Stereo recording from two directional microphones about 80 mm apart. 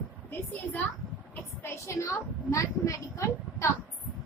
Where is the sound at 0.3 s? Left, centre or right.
Left.